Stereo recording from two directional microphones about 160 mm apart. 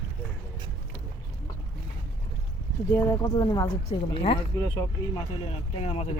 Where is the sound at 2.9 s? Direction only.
20° left (ahead or behind).